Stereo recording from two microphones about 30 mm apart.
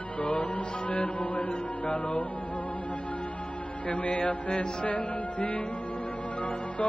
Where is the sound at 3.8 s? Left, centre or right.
Left.